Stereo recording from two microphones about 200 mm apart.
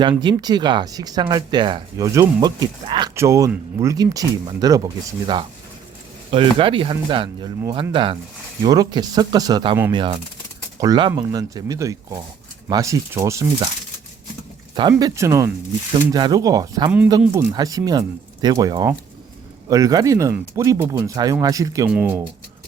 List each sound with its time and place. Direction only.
0.0 s speech: 25° right (ahead or behind)
14.8 s speech: 20° right (ahead or behind)